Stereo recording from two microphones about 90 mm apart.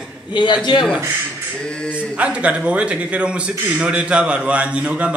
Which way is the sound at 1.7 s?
10° left (ahead or behind).